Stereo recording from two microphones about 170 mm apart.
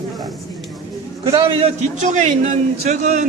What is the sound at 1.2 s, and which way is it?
A man's voice, 30° right (ahead or behind).